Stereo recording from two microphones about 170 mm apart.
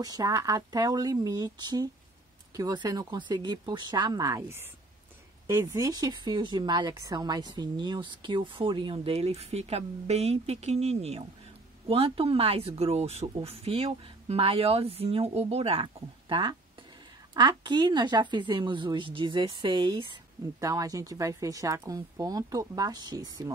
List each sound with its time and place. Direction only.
0.0 s a woman's voice: 20° right (ahead or behind)